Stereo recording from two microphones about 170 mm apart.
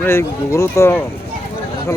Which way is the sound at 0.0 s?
15° left (ahead or behind).